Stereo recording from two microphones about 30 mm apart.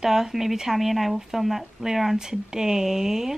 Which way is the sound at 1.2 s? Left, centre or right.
Centre.